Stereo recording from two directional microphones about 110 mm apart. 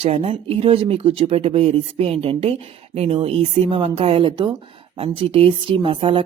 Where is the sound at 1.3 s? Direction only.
65° right (ahead or behind).